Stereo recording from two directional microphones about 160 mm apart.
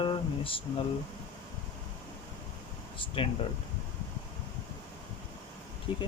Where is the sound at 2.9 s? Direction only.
30° left (ahead or behind).